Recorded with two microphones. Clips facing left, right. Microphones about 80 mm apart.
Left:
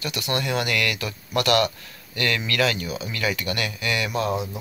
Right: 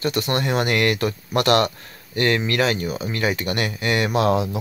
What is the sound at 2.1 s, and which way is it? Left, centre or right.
Speech, right.